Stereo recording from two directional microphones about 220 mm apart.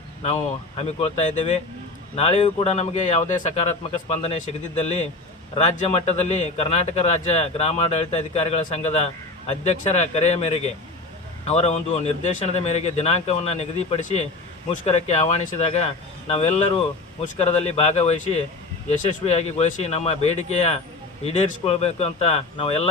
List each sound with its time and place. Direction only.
0.8 s a man's voice: 25° left (ahead or behind)
5.5 s a man's voice: 30° left (ahead or behind)